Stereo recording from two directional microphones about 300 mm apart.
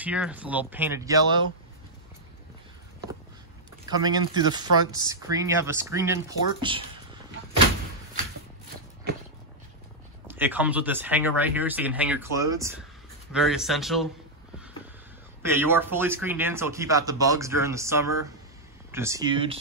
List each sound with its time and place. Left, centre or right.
0.0 s speech: centre
3.8 s speech: centre
10.2 s speech: centre
15.5 s speech: centre